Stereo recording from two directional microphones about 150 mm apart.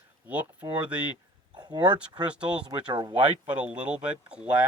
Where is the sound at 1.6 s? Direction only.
30° right (ahead or behind).